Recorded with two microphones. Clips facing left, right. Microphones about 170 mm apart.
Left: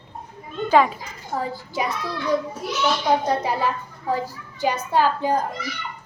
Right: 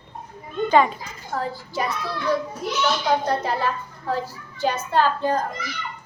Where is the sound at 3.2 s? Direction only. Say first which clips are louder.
Left 1 dB; 15° left (ahead or behind).